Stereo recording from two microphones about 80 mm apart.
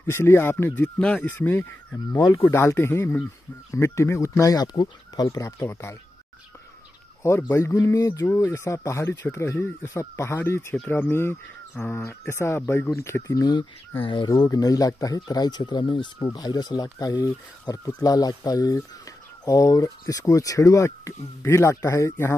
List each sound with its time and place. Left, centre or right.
0.0 s speech: left
0.9 s speech: centre
2.1 s speech: left
2.4 s speech: left
7.2 s speech: left
7.7 s speech: left
13.3 s speech: left
14.5 s speech: left
16.3 s speech: left